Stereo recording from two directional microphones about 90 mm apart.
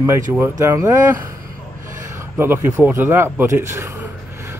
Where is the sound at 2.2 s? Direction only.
25° right (ahead or behind).